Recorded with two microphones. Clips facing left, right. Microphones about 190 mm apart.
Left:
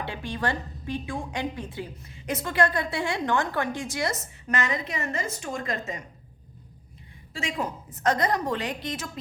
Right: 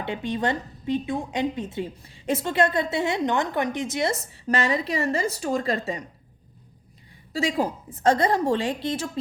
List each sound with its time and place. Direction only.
0.0 s a woman's voice: 20° right (ahead or behind)
7.3 s a woman's voice: 35° right (ahead or behind)